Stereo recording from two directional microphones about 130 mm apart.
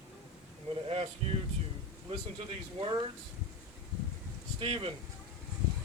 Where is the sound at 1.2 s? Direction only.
45° right (ahead or behind).